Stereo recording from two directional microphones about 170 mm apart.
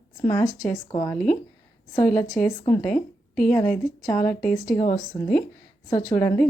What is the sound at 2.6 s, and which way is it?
Speech, 10° left (ahead or behind).